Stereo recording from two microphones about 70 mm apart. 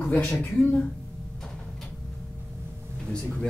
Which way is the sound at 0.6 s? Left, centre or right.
Left.